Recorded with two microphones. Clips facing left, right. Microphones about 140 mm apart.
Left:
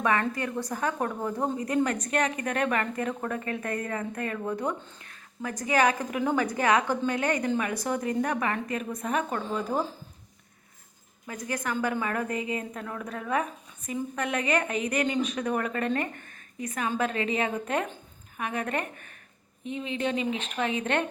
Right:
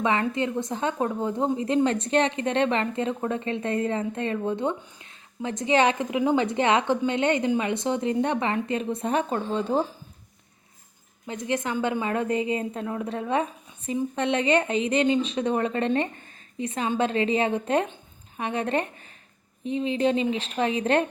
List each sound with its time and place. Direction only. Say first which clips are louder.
0.0 s a woman's voice: right 2 dB; 20° right (ahead or behind)
11.3 s a woman's voice: right 4 dB; 25° right (ahead or behind)